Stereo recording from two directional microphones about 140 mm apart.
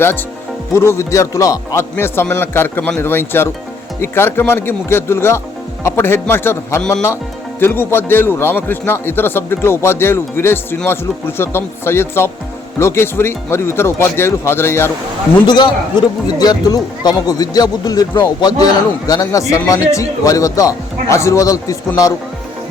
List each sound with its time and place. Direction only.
0.7 s a man's voice: 20° left (ahead or behind)
15.4 s speech: 30° left (ahead or behind)